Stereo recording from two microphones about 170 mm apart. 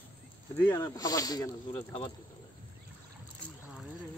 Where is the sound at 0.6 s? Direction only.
15° left (ahead or behind).